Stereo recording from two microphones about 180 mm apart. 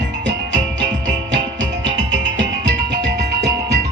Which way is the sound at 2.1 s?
80° right.